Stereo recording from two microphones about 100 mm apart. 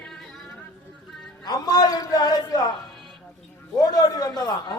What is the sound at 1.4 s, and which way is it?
A man's voice, 40° left (ahead or behind).